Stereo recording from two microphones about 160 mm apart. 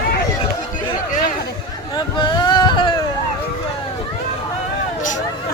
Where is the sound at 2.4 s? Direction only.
30° left (ahead or behind).